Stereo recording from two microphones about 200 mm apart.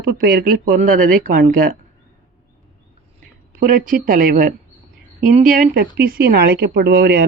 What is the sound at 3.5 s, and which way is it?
Speech, 45° right (ahead or behind).